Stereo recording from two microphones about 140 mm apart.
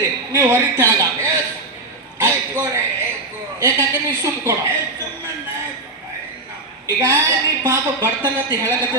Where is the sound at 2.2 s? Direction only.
20° right (ahead or behind).